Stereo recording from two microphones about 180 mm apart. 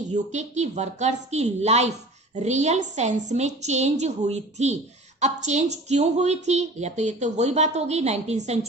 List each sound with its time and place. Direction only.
0.1 s a woman's voice: 40° right (ahead or behind)